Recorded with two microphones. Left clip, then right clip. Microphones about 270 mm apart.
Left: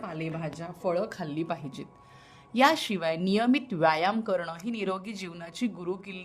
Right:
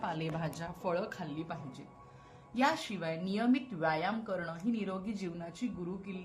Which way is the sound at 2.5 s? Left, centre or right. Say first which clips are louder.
Left 9 dB; left.